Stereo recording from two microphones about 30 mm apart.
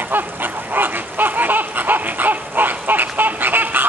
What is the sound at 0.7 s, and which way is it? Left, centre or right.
Dog, right.